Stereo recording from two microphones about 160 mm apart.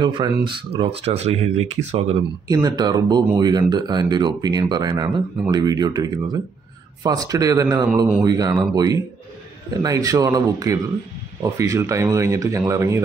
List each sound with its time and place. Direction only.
0.0 s speech: 30° right (ahead or behind)
2.4 s speech: 25° right (ahead or behind)